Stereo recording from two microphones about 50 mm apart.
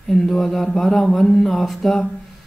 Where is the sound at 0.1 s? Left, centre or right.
Centre.